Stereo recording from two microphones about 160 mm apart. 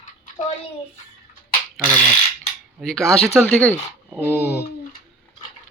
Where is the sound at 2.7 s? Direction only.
Centre (ahead or behind).